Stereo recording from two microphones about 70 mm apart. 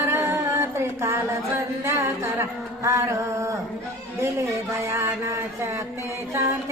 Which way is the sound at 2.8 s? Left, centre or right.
Right.